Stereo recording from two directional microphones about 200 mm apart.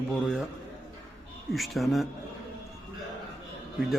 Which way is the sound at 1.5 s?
Centre (ahead or behind).